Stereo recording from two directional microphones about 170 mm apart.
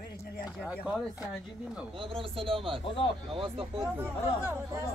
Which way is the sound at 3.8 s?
15° right (ahead or behind).